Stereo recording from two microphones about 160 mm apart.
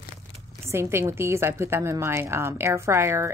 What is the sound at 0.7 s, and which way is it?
A woman's voice, 15° right (ahead or behind).